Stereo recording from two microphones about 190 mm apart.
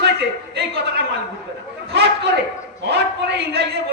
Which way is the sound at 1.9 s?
60° right (ahead or behind).